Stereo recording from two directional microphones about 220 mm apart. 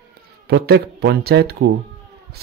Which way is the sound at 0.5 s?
45° right (ahead or behind).